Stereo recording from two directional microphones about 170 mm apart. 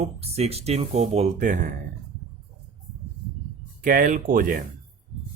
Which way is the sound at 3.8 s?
55° right (ahead or behind).